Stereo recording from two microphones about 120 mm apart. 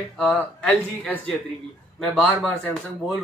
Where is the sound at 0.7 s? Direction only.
15° left (ahead or behind).